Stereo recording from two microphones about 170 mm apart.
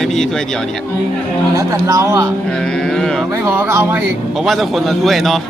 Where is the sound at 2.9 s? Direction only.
5° left (ahead or behind).